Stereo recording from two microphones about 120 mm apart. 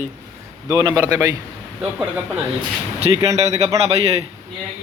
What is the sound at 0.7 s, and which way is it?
Speech, 35° right (ahead or behind).